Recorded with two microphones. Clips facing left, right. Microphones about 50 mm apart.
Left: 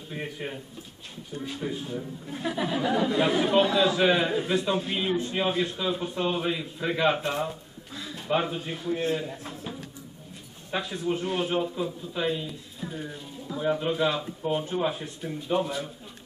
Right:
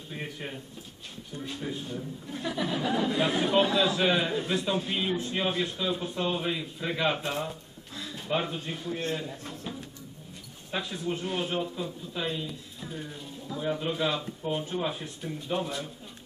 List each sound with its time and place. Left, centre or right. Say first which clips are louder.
0.1 s a man's voice: left 3 dB; centre